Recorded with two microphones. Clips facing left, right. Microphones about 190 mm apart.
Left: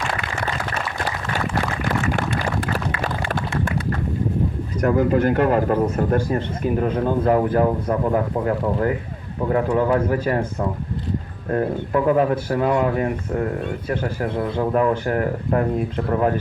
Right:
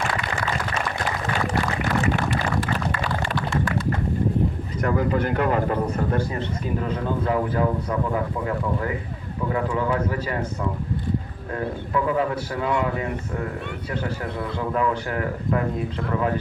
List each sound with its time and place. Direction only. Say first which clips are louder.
4.8 s speech: left 5 dB; 45° left (ahead or behind)
6.8 s speech: left 6 dB; 50° left (ahead or behind)
14.2 s speech: left 6 dB; 45° left (ahead or behind)